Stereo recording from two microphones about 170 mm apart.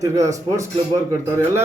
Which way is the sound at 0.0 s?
20° right (ahead or behind).